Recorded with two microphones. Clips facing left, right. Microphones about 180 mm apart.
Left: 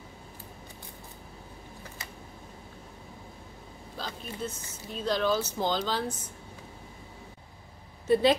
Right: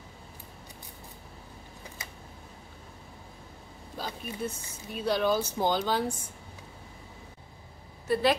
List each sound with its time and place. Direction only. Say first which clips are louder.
3.9 s speech: right 2 dB; 10° right (ahead or behind)
8.1 s a woman's voice: left 3 dB; 25° left (ahead or behind)